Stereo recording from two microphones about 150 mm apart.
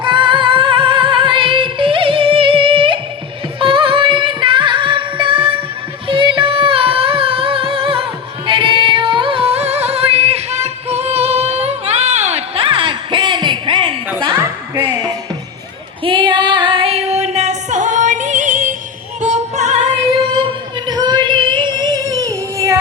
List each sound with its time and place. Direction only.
0.0 s music: 30° right (ahead or behind)
16.0 s music: 30° right (ahead or behind); by 19.7 s 50° right (ahead or behind)
20.4 s a sound: 30° right (ahead or behind)